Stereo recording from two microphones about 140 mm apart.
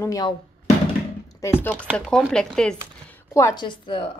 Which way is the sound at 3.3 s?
20° left (ahead or behind).